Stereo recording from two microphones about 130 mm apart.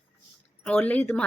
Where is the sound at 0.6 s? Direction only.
10° left (ahead or behind).